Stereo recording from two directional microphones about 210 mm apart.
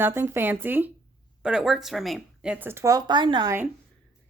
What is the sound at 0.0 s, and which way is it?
Speech, 10° right (ahead or behind).